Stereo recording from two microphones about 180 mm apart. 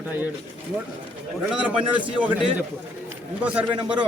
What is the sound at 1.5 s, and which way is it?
Speech, 5° right (ahead or behind).